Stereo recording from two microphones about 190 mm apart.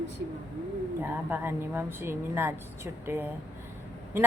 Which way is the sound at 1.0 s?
10° right (ahead or behind).